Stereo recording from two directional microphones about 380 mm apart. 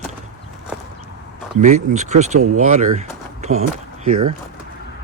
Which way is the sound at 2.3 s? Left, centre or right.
Right.